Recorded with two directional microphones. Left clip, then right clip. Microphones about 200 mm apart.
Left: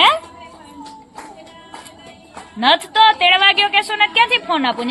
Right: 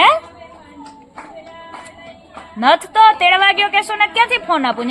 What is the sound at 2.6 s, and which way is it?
A woman's voice, 60° right (ahead or behind).